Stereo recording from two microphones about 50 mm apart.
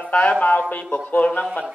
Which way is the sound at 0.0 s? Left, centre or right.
Left.